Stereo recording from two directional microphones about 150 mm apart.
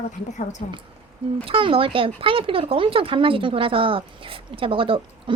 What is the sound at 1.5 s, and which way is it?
Speech, 35° right (ahead or behind).